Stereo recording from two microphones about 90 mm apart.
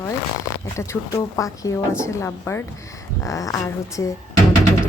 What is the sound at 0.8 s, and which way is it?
A woman's voice, 35° left (ahead or behind).